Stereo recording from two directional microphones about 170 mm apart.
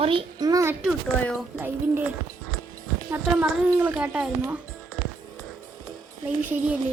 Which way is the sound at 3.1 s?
10° right (ahead or behind).